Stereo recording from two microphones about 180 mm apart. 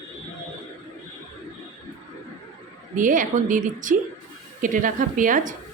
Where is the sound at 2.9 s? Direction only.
45° right (ahead or behind).